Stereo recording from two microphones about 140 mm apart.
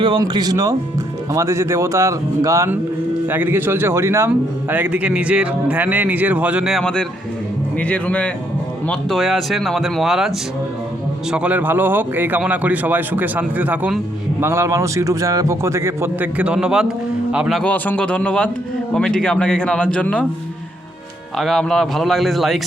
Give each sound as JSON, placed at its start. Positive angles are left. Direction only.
{"t": 0.0, "sound": "a man's voice", "side_deg": -30}
{"t": 17.6, "sound": "speech", "side_deg": 10}
{"t": 21.3, "sound": "speech", "side_deg": 0}